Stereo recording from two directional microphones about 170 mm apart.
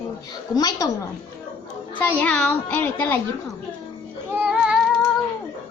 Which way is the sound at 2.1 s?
10° left (ahead or behind).